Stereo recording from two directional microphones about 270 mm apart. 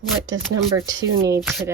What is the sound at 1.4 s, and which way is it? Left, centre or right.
Speech, centre.